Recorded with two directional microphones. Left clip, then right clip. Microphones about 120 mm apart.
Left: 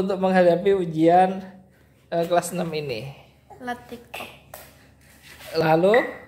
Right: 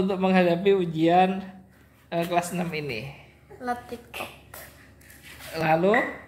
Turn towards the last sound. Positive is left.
turn(degrees=40)  # may be behind; listen again after turning